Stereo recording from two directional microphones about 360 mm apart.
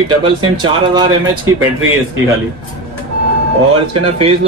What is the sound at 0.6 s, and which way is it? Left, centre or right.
Speech, centre.